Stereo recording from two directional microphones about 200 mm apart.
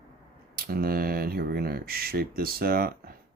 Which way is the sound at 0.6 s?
50° right (ahead or behind).